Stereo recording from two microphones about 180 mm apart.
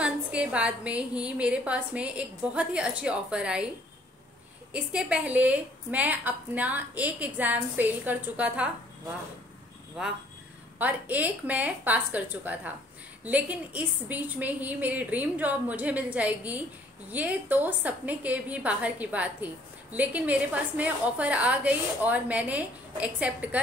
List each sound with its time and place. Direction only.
0.0 s a woman's voice: 5° right (ahead or behind)
4.7 s a woman's voice: 5° right (ahead or behind)
10.0 s a woman's voice: 5° right (ahead or behind)